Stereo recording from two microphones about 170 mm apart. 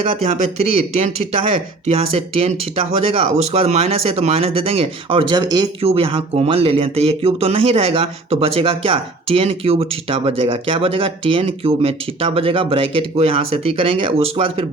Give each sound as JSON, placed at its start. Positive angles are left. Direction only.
{"t": 0.0, "sound": "speech", "side_deg": -40}